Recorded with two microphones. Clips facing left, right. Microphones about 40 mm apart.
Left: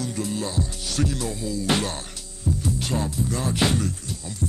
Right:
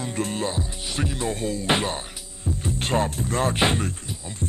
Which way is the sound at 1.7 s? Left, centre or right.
Right.